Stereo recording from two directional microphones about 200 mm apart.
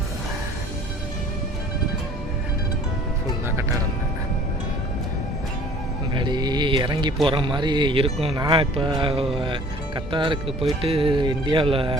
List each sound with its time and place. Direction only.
6.1 s music: 20° right (ahead or behind)
7.3 s speech: 25° right (ahead or behind)